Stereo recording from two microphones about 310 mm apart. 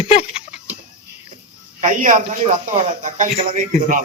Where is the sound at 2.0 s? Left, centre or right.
Right.